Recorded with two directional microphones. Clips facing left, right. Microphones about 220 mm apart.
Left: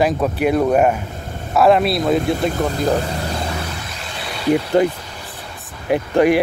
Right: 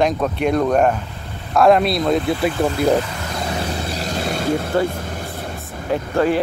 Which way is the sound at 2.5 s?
40° left (ahead or behind).